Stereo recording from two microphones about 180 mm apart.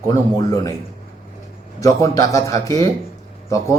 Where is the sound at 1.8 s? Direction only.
20° left (ahead or behind).